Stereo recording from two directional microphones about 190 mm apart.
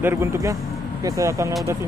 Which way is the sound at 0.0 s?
10° right (ahead or behind).